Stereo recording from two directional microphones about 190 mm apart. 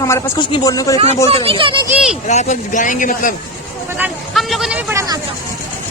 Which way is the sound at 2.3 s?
40° left (ahead or behind).